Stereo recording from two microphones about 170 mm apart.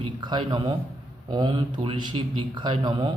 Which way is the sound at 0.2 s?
25° right (ahead or behind).